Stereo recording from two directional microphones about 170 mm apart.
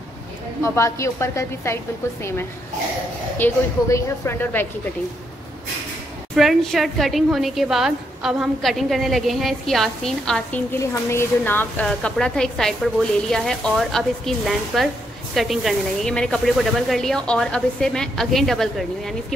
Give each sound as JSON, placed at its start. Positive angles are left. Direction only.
{"t": 0.7, "sound": "a woman's voice", "side_deg": 15}
{"t": 3.3, "sound": "a woman's voice", "side_deg": 15}
{"t": 6.3, "sound": "a woman's voice", "side_deg": 0}
{"t": 10.8, "sound": "a woman's voice", "side_deg": 15}